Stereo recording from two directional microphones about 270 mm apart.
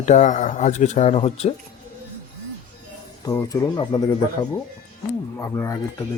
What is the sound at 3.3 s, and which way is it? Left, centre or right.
Speech, centre.